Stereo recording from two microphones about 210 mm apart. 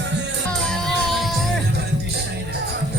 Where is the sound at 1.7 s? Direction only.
50° right (ahead or behind).